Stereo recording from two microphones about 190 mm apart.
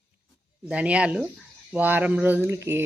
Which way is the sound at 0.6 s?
5° right (ahead or behind).